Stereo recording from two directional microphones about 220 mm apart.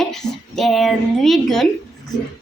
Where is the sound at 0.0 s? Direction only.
Centre (ahead or behind).